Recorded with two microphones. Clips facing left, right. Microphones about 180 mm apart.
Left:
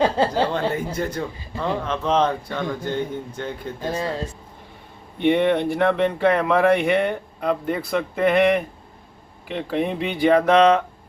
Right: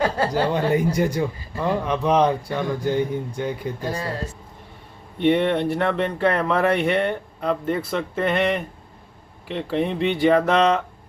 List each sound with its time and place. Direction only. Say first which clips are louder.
0.0 s speech: left 2 dB; 25° left (ahead or behind)
0.4 s speech: right 3 dB; 15° right (ahead or behind)
5.2 s speech: left 1 dB; centre (ahead or behind)